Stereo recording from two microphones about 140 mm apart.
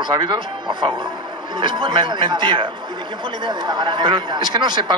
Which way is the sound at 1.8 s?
30° right (ahead or behind).